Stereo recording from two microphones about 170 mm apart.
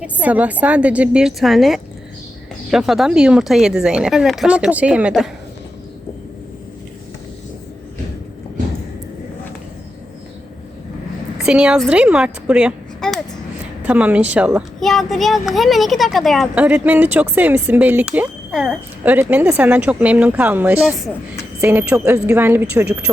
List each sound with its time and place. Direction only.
0.0 s speech: 10° right (ahead or behind)
11.3 s speech: 5° right (ahead or behind)